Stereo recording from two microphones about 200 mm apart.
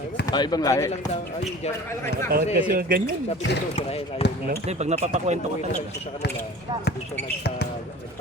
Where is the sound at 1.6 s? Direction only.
30° left (ahead or behind).